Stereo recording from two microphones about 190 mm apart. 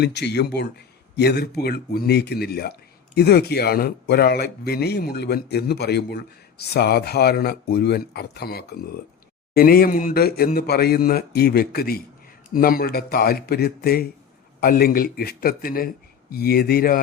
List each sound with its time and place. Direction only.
0.0 s a man's voice: 65° left (ahead or behind)